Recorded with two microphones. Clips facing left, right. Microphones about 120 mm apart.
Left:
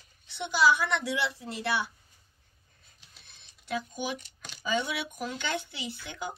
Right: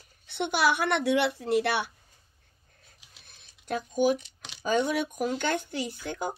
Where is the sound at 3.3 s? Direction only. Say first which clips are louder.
Right 2 dB; 45° right (ahead or behind).